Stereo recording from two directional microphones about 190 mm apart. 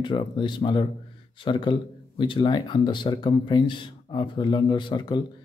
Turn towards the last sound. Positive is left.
turn(degrees=25)  # may be behind; listen again after turning